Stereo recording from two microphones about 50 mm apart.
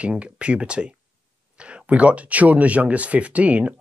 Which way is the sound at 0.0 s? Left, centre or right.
Right.